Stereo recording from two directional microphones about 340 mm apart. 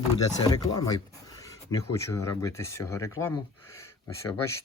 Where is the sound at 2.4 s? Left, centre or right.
Centre.